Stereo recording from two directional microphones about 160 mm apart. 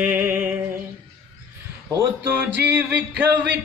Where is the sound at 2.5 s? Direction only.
10° right (ahead or behind).